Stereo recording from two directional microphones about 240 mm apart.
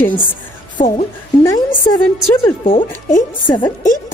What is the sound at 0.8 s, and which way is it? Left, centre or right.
Speech, left.